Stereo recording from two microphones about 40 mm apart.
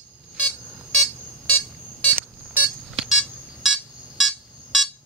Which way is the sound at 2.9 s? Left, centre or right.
Centre.